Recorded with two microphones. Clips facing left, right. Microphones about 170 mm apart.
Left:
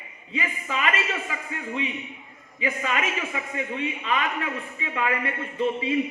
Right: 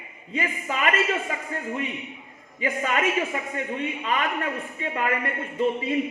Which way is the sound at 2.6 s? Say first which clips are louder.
Right 2 dB; 45° right (ahead or behind).